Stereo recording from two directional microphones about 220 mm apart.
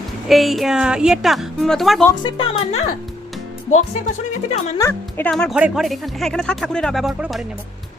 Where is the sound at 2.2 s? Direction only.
25° left (ahead or behind).